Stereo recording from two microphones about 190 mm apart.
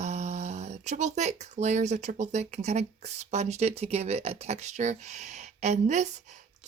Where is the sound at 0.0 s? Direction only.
35° right (ahead or behind).